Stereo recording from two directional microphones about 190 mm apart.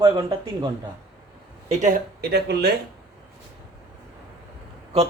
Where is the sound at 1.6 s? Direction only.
35° right (ahead or behind).